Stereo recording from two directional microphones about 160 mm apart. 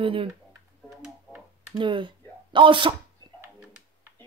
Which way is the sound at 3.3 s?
15° right (ahead or behind).